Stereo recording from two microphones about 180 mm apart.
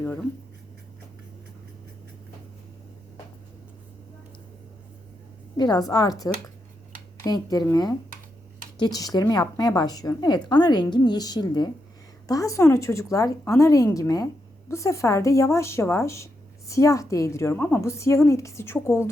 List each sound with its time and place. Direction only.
0.0 s speech: 10° left (ahead or behind)
5.5 s a woman's voice: 25° left (ahead or behind)